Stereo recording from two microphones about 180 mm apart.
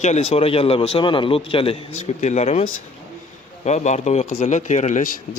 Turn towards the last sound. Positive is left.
turn(degrees=45)  # may be behind; listen again after turning